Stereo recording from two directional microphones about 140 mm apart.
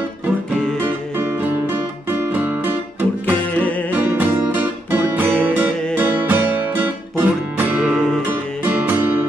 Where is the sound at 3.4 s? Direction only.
10° left (ahead or behind).